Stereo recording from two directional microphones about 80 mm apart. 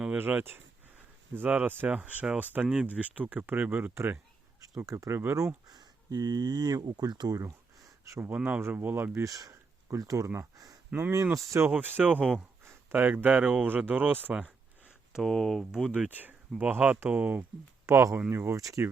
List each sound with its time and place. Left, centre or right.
0.2 s speech: right
2.0 s speech: centre; by 4.2 s right
4.9 s speech: right
5.6 s speech: right
8.4 s speech: right
9.2 s a sound: right
10.0 s speech: right
11.7 s speech: right
15.1 s speech: centre
16.0 s speech: right
17.8 s speech: right